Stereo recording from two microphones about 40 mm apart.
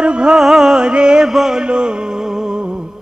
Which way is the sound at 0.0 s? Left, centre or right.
Right.